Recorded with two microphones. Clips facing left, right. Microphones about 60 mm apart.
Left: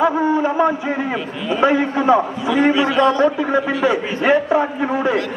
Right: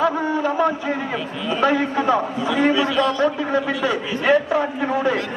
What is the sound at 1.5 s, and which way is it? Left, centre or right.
Speech, centre.